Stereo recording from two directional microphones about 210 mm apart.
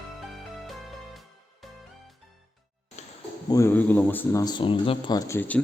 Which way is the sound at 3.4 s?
15° left (ahead or behind).